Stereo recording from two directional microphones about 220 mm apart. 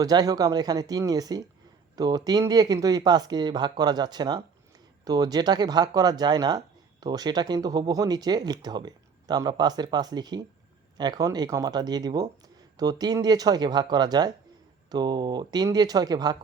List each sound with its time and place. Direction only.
0.0 s speech: 15° right (ahead or behind)